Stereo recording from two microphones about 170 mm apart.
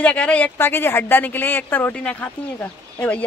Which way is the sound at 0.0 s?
5° left (ahead or behind).